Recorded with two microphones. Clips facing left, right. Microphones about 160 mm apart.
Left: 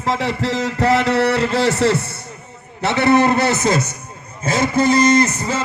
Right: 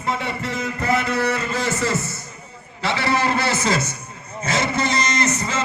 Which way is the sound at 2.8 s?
55° left (ahead or behind).